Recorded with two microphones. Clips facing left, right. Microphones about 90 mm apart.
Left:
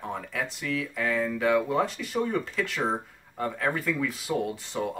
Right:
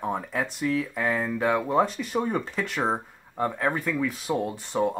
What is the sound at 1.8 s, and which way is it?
Speech, 45° right (ahead or behind).